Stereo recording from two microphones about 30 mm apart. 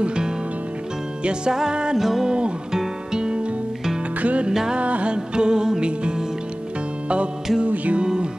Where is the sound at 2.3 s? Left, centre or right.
Right.